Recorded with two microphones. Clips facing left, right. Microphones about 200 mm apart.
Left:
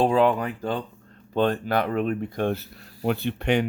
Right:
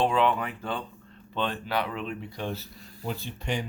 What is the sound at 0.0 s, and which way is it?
Speech, 40° left (ahead or behind).